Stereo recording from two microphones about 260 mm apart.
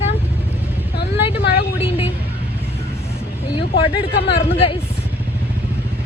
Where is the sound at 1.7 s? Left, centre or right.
Left.